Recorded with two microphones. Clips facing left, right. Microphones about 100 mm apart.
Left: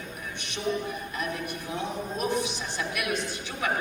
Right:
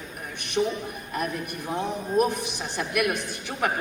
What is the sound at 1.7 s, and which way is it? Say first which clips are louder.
A woman's voice: right 7 dB; 55° right (ahead or behind).